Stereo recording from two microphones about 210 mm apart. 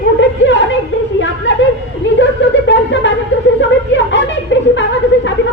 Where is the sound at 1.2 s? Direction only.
60° left (ahead or behind).